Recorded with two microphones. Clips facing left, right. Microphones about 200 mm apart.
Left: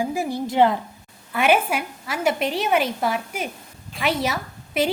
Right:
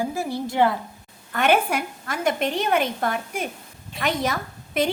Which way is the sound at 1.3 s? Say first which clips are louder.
Left 1 dB; 5° left (ahead or behind).